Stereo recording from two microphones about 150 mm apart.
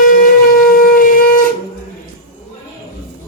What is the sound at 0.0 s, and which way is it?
Shofar, 70° left (ahead or behind).